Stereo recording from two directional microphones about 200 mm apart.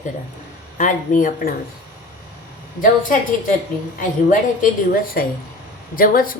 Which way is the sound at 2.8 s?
40° left (ahead or behind).